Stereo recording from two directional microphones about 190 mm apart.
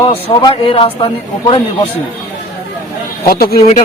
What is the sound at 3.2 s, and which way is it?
Speech, 50° left (ahead or behind).